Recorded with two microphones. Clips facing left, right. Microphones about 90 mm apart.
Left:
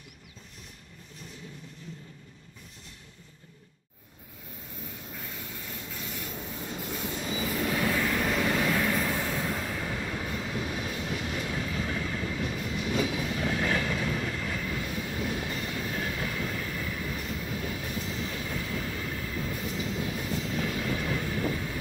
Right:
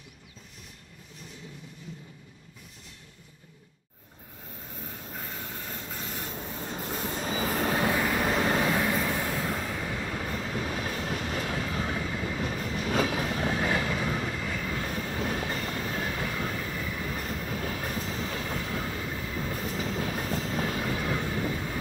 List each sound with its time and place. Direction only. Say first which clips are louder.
4.8 s train: right 2 dB; 40° right (ahead or behind)
7.9 s vehicle: right 1 dB; 25° right (ahead or behind)
8.8 s vehicle: right 1 dB; 10° right (ahead or behind)
9.3 s train: right 1 dB; centre (ahead or behind)
10.5 s train: right 1 dB; 40° right (ahead or behind)
11.6 s vehicle: right 1 dB; 30° right (ahead or behind)
12.0 s train: even; 10° right (ahead or behind)
12.3 s train: right 1 dB; 35° right (ahead or behind)
13.6 s train: right 1 dB; 15° right (ahead or behind)
14.7 s train: right 1 dB; 40° right (ahead or behind)
16.5 s train: right 1 dB; 15° right (ahead or behind)
17.0 s train: right 1 dB; 40° right (ahead or behind)
18.9 s train: right 1 dB; 15° right (ahead or behind)
19.5 s train: right 3 dB; 40° right (ahead or behind)